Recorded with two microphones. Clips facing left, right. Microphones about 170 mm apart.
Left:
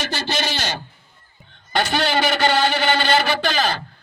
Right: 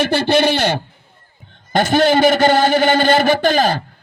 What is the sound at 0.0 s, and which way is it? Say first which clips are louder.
A man's voice: right 11 dB; 60° right (ahead or behind).